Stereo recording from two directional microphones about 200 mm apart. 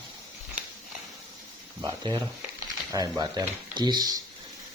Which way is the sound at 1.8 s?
20° right (ahead or behind).